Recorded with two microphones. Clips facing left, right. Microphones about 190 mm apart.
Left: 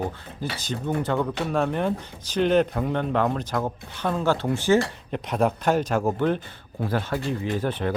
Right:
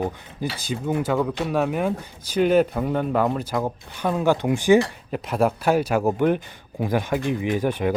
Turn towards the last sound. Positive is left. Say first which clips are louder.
# right 4 dB
turn(degrees=-10)  # may be behind; listen again after turning